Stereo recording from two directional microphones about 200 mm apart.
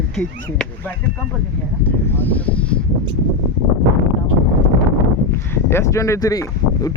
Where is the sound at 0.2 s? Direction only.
5° left (ahead or behind).